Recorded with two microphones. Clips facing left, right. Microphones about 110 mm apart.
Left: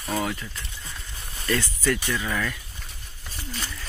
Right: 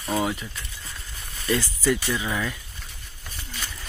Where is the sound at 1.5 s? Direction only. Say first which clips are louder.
Right 2 dB; 15° right (ahead or behind).